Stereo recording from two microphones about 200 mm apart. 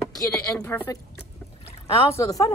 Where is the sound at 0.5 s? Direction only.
10° left (ahead or behind).